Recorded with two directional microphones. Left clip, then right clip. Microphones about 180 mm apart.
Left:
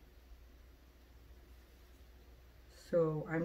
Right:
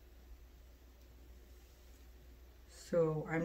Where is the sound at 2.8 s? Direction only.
20° right (ahead or behind).